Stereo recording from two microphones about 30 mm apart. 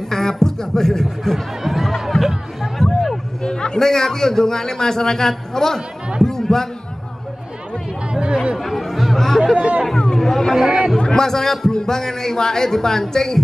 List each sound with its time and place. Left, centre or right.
0.1 s a man's voice: centre
1.6 s speech: centre
2.1 s music: centre
2.8 s a sound: centre
3.4 s a man's voice: left
3.8 s a man's voice: centre
8.1 s speech: right
8.5 s speech: centre
9.6 s hubbub: right
9.9 s chatter: centre
10.5 s speech: centre
11.0 s a man's voice: left